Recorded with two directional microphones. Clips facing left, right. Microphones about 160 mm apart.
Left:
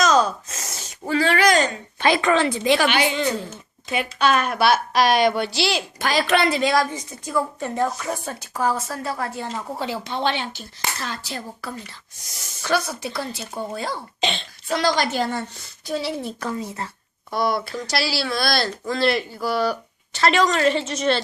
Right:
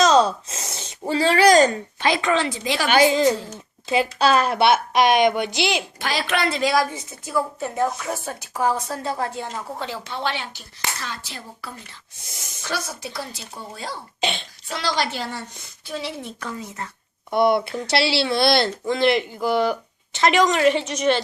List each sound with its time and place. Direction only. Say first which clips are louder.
0.0 s gasp: right 2 dB; 30° right (ahead or behind)
2.0 s a woman's voice: left 3 dB; 50° left (ahead or behind)
2.9 s a woman's voice: right 5 dB; 35° right (ahead or behind); by 5.8 s 20° right (ahead or behind)
6.0 s a woman's voice: left 4 dB; 45° left (ahead or behind)
6.5 s a woman's voice: left 1 dB; centre (ahead or behind); by 9.5 s 20° right (ahead or behind)
9.7 s speech: left 3 dB; 10° left (ahead or behind)
11.0 s a woman's voice: left 4 dB; 40° left (ahead or behind)
12.6 s a woman's voice: left 6 dB; 60° left (ahead or behind)
14.2 s a child's voice: right 1 dB; 10° right (ahead or behind)
14.7 s a woman's voice: left 4 dB; 50° left (ahead or behind)
15.9 s a woman's voice: left 4 dB; 35° left (ahead or behind)
17.3 s a woman's voice: right 5 dB; 25° right (ahead or behind)